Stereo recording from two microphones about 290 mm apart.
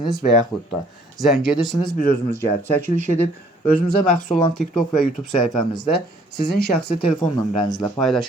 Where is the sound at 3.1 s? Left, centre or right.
Left.